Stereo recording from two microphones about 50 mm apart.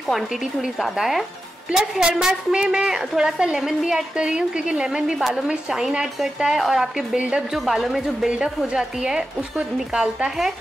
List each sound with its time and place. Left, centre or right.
0.7 s speech: centre
4.2 s speech: centre